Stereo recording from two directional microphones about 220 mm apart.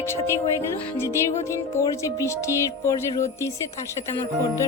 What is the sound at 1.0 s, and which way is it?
Music, 10° left (ahead or behind).